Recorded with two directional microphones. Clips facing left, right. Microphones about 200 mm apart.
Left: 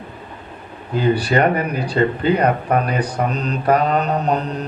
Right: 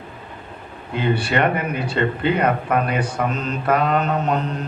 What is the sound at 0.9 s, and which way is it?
Speech, 35° left (ahead or behind).